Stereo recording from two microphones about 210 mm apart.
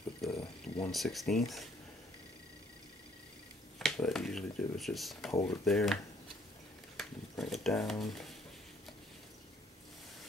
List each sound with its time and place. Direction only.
0.3 s a sound: 25° left (ahead or behind)
0.9 s speech: centre (ahead or behind)
3.8 s speech: centre (ahead or behind)
7.0 s speech: centre (ahead or behind)